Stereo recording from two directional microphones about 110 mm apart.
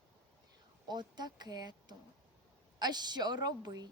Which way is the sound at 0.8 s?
40° right (ahead or behind).